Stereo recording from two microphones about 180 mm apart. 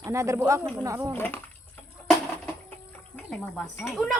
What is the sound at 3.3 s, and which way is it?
Speech, centre (ahead or behind).